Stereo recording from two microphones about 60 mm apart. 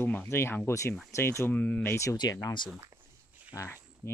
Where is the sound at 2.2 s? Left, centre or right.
Left.